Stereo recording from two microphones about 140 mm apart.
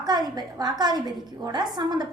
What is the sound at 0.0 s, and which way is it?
A woman's voice, 30° right (ahead or behind).